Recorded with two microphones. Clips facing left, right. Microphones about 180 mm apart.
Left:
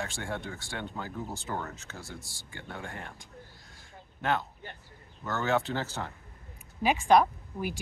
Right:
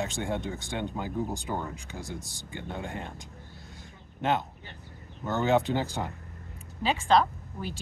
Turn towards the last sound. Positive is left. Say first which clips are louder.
# left 2 dB
turn(degrees=10)  # may be behind; listen again after turning